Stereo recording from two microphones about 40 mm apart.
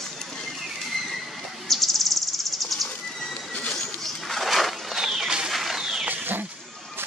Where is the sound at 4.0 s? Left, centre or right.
Centre.